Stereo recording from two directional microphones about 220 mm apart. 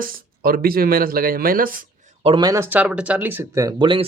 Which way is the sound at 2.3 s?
15° right (ahead or behind).